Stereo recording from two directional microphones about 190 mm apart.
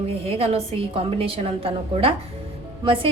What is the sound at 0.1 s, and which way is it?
A woman's voice, 30° right (ahead or behind).